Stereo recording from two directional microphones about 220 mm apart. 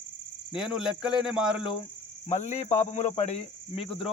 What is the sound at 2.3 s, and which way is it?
Speech, 30° left (ahead or behind).